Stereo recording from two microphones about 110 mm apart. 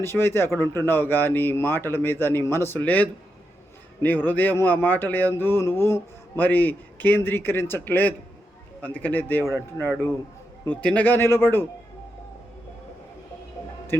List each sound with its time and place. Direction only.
0.0 s a man's voice: 20° left (ahead or behind)